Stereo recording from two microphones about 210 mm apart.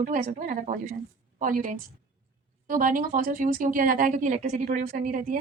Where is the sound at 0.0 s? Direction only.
40° right (ahead or behind).